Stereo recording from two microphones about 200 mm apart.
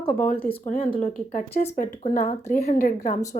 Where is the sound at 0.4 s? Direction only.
40° left (ahead or behind).